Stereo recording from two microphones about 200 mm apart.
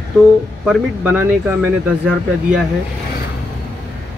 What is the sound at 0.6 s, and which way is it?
Speech, 5° right (ahead or behind).